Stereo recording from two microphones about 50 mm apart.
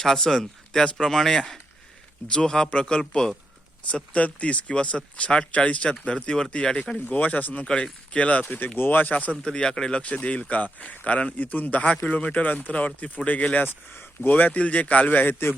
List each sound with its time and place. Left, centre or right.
0.0 s speech: centre
3.8 s speech: left
7.1 s speech: left
8.5 s speech: left
9.4 s speech: centre
10.0 s speech: left
15.3 s a man's voice: left